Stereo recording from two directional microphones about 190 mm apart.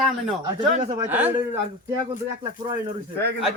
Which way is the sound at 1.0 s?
10° right (ahead or behind).